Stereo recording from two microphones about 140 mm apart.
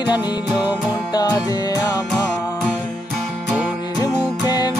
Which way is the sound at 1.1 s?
30° left (ahead or behind).